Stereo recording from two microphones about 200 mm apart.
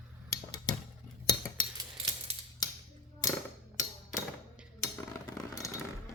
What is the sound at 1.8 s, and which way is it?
Scissors, 25° right (ahead or behind).